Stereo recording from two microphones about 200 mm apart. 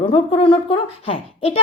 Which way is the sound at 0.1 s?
25° left (ahead or behind).